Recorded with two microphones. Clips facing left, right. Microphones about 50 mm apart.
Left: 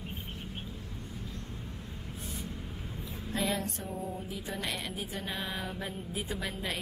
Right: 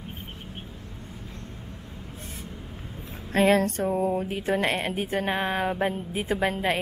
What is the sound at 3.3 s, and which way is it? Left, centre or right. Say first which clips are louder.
Speech: right 13 dB; right.